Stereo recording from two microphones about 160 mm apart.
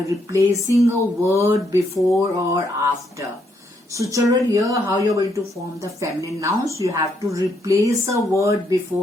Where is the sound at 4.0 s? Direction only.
20° right (ahead or behind).